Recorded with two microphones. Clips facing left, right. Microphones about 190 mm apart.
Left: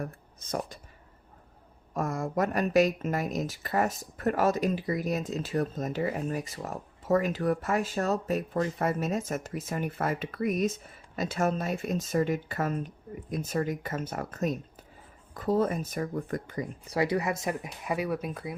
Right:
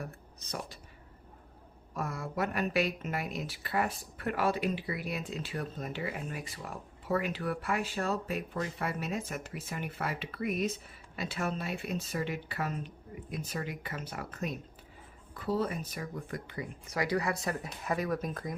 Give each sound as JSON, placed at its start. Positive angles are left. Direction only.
{"t": 0.0, "sound": "speech", "side_deg": 50}
{"t": 1.9, "sound": "speech", "side_deg": 45}
{"t": 17.4, "sound": "speech", "side_deg": 15}